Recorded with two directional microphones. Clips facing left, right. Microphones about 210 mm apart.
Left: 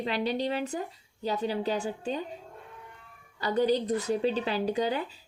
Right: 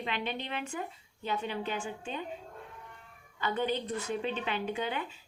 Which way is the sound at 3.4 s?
35° left (ahead or behind).